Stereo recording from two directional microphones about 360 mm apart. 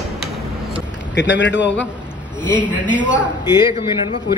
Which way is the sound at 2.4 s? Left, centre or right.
Centre.